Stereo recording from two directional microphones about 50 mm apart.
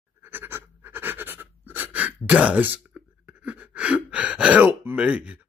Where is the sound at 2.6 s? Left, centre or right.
Right.